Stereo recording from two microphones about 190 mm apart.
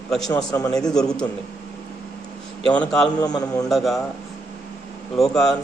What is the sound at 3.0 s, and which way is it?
Speech, 20° left (ahead or behind).